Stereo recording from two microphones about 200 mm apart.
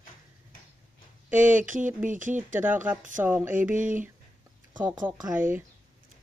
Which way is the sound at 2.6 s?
10° right (ahead or behind).